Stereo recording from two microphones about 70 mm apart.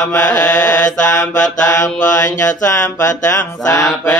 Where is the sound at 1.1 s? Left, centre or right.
Left.